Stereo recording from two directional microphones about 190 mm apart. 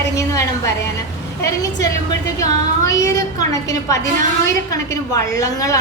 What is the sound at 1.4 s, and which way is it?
A woman's voice, 15° left (ahead or behind).